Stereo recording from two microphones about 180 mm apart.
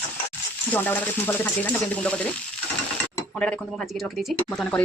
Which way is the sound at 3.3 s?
5° left (ahead or behind).